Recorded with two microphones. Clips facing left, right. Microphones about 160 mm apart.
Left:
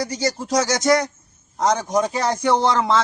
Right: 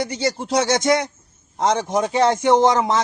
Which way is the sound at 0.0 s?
25° right (ahead or behind).